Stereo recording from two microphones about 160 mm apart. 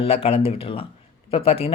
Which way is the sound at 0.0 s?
35° left (ahead or behind).